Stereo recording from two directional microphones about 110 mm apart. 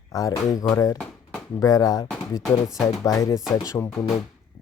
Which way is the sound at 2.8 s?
30° left (ahead or behind).